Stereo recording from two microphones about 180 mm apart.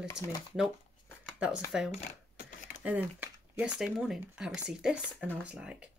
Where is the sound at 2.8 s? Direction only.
10° right (ahead or behind).